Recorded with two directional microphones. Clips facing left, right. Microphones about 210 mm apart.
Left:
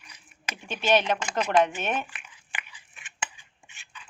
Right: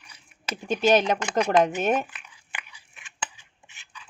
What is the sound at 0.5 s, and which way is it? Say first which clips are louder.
A woman's voice: right 4 dB; 40° right (ahead or behind).